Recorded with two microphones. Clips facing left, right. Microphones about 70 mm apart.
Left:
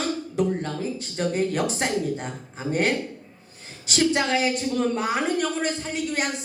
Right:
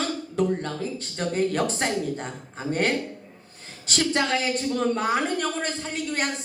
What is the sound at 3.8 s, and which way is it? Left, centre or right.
A woman's voice, right.